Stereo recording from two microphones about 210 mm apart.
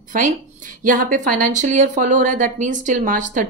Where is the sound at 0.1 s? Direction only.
40° right (ahead or behind).